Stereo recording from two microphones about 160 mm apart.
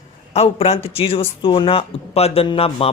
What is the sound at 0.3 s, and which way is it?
A man's voice, 40° left (ahead or behind).